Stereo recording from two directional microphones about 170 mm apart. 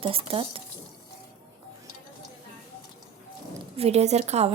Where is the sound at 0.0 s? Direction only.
30° right (ahead or behind).